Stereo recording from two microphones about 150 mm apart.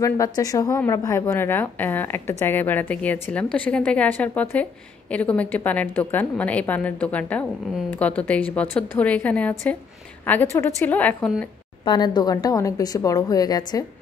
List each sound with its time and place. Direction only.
0.0 s a woman's voice: 20° left (ahead or behind)
11.8 s a woman's voice: 30° left (ahead or behind)